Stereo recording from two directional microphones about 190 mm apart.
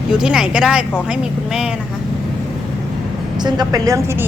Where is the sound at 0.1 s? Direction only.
5° right (ahead or behind).